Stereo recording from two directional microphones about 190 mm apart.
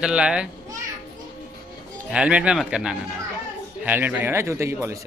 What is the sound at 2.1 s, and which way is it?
A man's voice, 5° right (ahead or behind).